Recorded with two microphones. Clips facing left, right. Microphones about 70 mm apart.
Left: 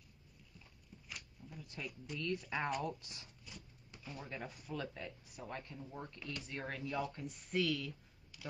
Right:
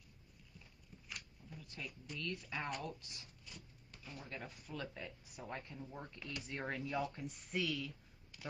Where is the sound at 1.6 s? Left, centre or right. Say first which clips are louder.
Left 2 dB; left.